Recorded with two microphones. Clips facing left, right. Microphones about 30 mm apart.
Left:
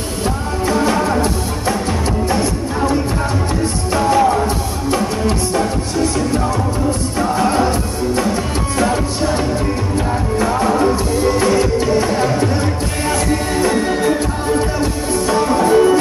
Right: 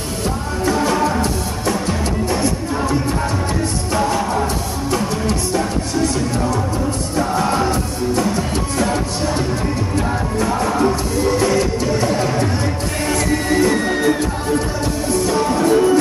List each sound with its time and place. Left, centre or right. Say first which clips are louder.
0.7 s music: left 1 dB; centre
7.2 s music: left 1 dB; centre
8.7 s music: left 4 dB; centre
10.4 s music: left 2 dB; centre
13.0 s music: left 1 dB; centre
15.4 s music: left 3 dB; centre